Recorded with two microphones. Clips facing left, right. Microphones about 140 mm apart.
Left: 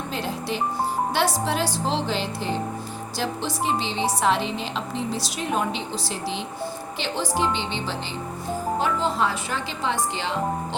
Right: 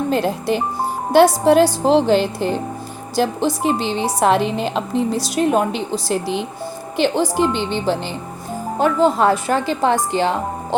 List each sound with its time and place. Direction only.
0.1 s a woman's voice: 50° right (ahead or behind)
7.2 s speech: 10° right (ahead or behind)
7.5 s a woman's voice: 50° right (ahead or behind)